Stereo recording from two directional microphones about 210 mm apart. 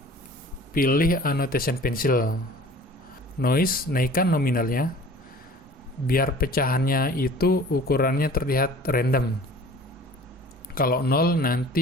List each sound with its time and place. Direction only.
0.7 s speech: 45° left (ahead or behind)
3.4 s speech: 45° left (ahead or behind)
6.1 s speech: 45° left (ahead or behind)
10.8 s speech: 45° left (ahead or behind)